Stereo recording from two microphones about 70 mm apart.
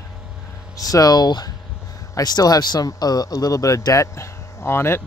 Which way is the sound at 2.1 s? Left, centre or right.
Left.